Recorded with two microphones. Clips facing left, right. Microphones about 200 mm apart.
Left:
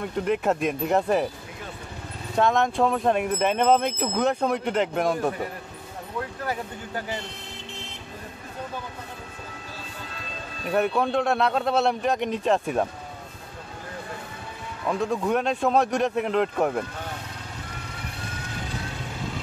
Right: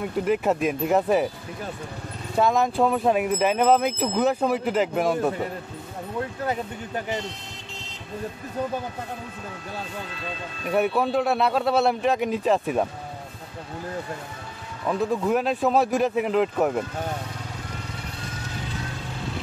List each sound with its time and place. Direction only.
0.0 s speech: 5° right (ahead or behind)
2.3 s speech: 5° right (ahead or behind)
6.4 s speech: 20° right (ahead or behind)
10.7 s speech: 5° right (ahead or behind)
14.9 s speech: 5° right (ahead or behind)